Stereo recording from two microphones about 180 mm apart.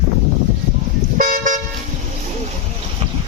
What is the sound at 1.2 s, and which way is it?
Toot, 50° right (ahead or behind).